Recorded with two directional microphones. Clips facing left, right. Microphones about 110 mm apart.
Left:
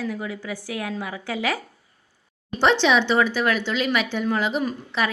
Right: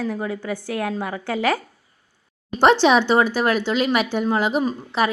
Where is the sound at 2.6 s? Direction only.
45° right (ahead or behind).